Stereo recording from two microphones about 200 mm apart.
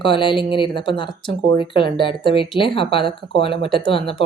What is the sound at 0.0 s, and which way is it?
Speech, 25° left (ahead or behind).